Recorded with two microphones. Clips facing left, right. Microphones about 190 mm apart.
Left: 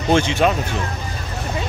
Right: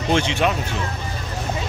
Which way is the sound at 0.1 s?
45° left (ahead or behind).